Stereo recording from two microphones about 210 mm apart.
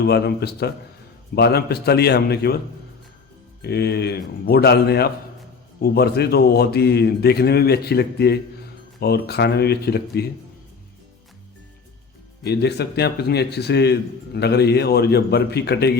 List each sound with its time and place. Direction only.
0.0 s a man's voice: 50° left (ahead or behind)
3.6 s a man's voice: 50° left (ahead or behind)
12.4 s a man's voice: 50° left (ahead or behind)